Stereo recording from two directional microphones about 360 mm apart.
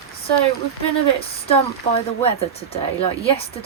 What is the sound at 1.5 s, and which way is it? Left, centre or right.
Speech, centre.